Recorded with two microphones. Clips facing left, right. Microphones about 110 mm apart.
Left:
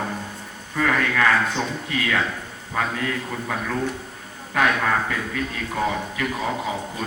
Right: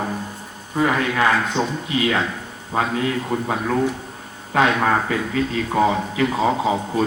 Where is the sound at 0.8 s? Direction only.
20° right (ahead or behind).